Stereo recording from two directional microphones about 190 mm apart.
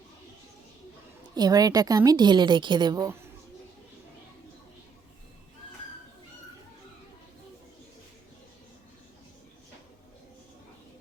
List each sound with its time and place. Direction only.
1.4 s a woman's voice: 20° right (ahead or behind)